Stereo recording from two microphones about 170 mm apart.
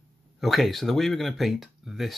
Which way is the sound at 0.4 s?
Centre (ahead or behind).